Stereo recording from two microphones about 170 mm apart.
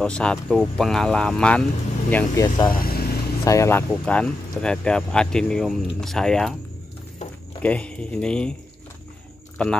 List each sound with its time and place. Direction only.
0.0 s speech: 5° left (ahead or behind)
2.7 s vehicle: 60° left (ahead or behind)
3.4 s speech: 15° left (ahead or behind)
7.6 s speech: 5° left (ahead or behind)
9.6 s speech: 5° left (ahead or behind)